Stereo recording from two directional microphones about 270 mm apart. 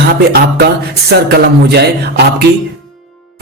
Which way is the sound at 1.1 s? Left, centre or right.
Right.